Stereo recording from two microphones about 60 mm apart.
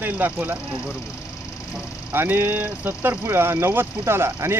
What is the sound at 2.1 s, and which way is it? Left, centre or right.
Speech, right.